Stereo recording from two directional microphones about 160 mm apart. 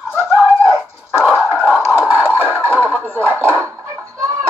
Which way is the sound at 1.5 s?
10° left (ahead or behind).